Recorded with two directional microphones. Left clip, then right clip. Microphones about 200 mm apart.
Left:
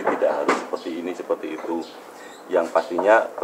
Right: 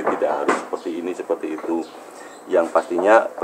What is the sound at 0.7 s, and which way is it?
Speech, 25° right (ahead or behind).